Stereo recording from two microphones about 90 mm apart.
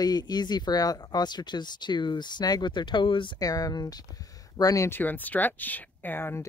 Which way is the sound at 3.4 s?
45° left (ahead or behind).